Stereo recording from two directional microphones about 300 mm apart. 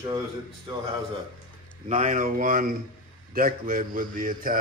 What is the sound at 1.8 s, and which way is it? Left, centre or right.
A man's voice, right.